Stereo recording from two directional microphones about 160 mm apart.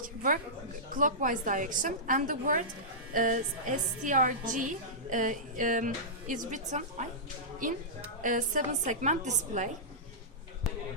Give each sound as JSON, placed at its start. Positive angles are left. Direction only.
{"t": 0.0, "sound": "a woman's voice", "side_deg": -60}
{"t": 8.2, "sound": "a woman's voice", "side_deg": -55}